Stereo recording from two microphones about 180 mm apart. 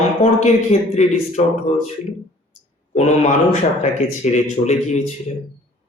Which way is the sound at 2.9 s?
40° left (ahead or behind).